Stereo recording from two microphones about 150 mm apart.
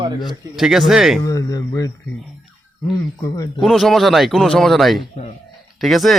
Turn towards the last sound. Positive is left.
turn(degrees=0)  # may be behind; listen again after turning